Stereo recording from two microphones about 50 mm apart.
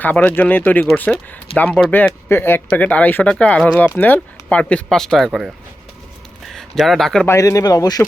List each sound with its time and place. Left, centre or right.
0.0 s speech: left
2.3 s speech: left
2.7 s speech: left
3.2 s speech: left
4.9 s speech: centre
6.4 s a sound: centre
7.3 s speech: left